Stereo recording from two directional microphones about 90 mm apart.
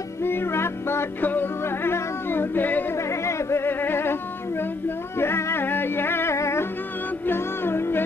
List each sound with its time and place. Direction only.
0.2 s music: 25° left (ahead or behind)
3.0 s a sound: 30° left (ahead or behind)
7.2 s music: 25° left (ahead or behind)